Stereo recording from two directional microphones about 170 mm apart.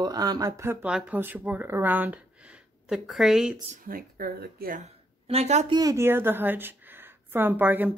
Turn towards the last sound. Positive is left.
turn(degrees=-10)  # may be behind; listen again after turning